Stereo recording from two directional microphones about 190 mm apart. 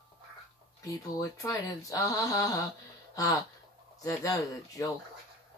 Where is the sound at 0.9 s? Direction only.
20° left (ahead or behind).